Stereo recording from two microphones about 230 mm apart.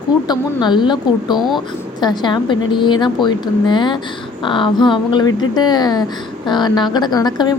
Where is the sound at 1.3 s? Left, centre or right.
Centre.